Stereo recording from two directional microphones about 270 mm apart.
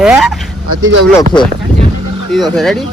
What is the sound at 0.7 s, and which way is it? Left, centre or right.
Speech, right.